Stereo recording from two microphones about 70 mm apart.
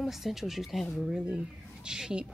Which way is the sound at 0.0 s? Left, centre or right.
Centre.